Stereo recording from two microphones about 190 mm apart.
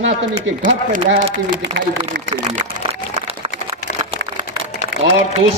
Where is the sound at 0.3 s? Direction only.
40° right (ahead or behind).